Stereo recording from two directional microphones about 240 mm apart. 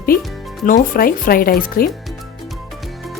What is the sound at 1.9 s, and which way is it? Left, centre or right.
Music, centre.